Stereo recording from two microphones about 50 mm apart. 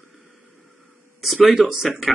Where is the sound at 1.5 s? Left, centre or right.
Centre.